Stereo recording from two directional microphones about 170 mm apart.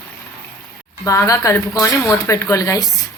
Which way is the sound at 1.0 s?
20° left (ahead or behind).